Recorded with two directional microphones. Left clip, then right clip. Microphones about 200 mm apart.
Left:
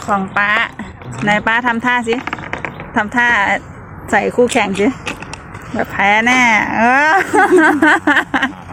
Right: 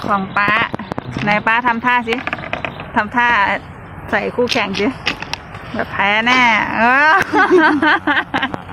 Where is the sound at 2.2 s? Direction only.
35° right (ahead or behind).